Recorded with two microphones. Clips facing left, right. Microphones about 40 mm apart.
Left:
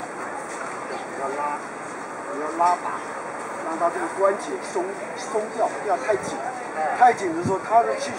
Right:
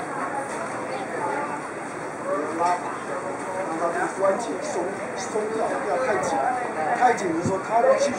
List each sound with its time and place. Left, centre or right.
1.2 s vehicle: centre
2.6 s vehicle: centre
3.8 s speech: centre